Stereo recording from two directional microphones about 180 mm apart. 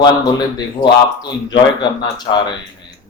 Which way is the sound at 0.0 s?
20° left (ahead or behind).